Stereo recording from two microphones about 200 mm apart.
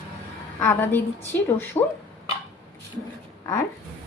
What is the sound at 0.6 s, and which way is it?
A woman's voice, 10° left (ahead or behind).